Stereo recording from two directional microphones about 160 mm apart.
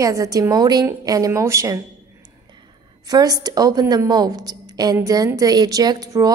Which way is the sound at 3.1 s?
25° right (ahead or behind).